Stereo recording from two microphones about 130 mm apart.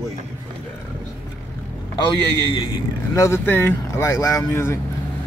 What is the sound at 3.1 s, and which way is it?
Speech, 20° left (ahead or behind).